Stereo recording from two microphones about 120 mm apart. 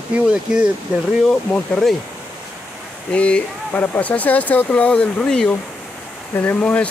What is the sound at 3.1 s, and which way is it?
Speech, 10° left (ahead or behind).